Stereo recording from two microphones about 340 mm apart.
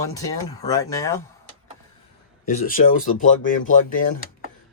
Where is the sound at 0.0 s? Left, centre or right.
Centre.